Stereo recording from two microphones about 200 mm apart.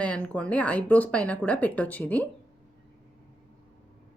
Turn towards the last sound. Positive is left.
turn(degrees=5)  # may be behind; listen again after turning